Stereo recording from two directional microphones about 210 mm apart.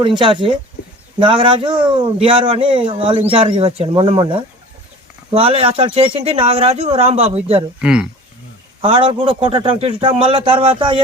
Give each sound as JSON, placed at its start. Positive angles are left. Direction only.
{"t": 0.0, "sound": "a man's voice", "side_deg": -20}
{"t": 7.8, "sound": "speech", "side_deg": -5}
{"t": 8.8, "sound": "a man's voice", "side_deg": -25}